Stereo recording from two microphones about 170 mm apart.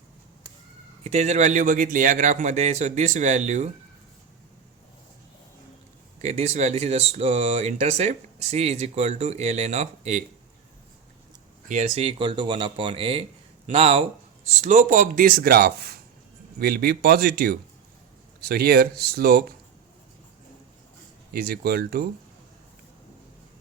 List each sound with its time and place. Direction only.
1.0 s a man's voice: 40° right (ahead or behind)
6.2 s speech: 40° right (ahead or behind)
11.7 s speech: 40° right (ahead or behind); by 19.5 s 65° right (ahead or behind)
21.3 s speech: 65° right (ahead or behind)